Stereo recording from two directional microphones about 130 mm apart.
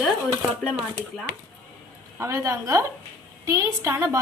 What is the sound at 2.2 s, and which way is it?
A woman's voice, 25° right (ahead or behind).